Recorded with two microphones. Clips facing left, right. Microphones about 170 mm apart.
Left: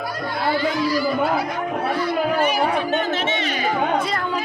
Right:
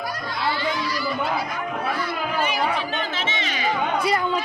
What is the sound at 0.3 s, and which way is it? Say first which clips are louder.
Speech: left 5 dB; 50° left (ahead or behind).